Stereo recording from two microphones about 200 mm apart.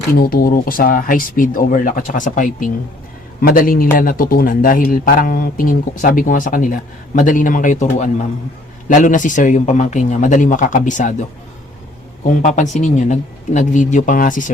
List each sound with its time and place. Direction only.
0.1 s speech: 50° left (ahead or behind)
12.3 s speech: 35° left (ahead or behind)